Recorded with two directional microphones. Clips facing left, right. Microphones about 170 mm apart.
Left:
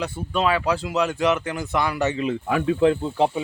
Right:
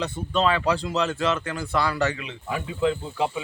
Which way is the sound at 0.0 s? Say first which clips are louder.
Even; 10° left (ahead or behind).